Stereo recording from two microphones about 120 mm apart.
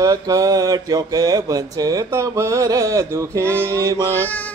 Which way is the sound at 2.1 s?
25° right (ahead or behind).